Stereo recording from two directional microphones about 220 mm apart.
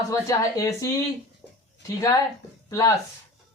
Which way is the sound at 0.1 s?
15° left (ahead or behind).